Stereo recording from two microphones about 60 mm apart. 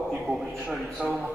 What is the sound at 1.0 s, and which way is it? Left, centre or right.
Speech, centre.